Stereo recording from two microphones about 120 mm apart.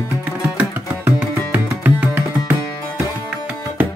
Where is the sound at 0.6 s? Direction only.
15° right (ahead or behind).